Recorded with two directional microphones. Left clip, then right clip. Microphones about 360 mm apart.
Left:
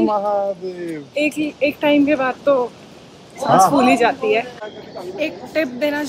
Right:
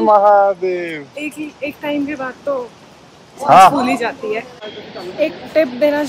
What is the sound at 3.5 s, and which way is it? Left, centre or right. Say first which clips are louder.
Speech: right 4 dB; centre.